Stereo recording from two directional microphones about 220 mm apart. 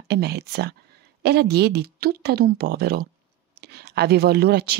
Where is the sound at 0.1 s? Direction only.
45° right (ahead or behind).